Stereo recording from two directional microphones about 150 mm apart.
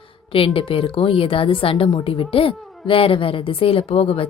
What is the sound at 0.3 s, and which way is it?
A woman's voice, 35° left (ahead or behind).